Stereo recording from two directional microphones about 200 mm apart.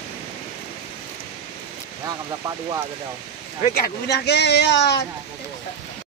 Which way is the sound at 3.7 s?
50° left (ahead or behind).